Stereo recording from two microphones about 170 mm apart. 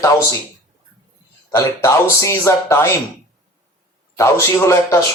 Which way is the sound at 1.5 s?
20° left (ahead or behind).